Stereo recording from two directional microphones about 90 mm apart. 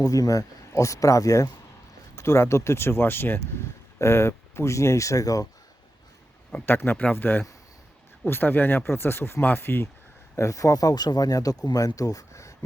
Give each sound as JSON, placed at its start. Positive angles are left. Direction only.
{"t": 0.0, "sound": "speech", "side_deg": 40}
{"t": 6.5, "sound": "speech", "side_deg": 20}
{"t": 10.3, "sound": "speech", "side_deg": 35}